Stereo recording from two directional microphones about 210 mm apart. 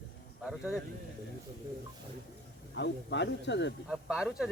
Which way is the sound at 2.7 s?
55° left (ahead or behind).